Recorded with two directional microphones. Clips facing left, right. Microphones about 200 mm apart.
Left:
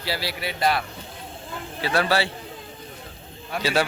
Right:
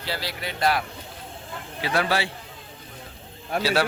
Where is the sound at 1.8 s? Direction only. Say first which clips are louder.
Left 2 dB; 15° right (ahead or behind).